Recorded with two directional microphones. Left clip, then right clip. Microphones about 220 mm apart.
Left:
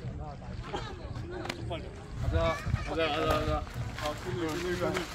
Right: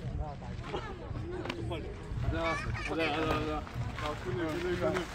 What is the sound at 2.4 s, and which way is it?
Run, 45° left (ahead or behind).